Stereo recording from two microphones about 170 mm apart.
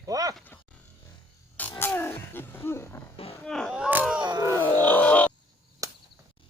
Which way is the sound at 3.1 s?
35° left (ahead or behind).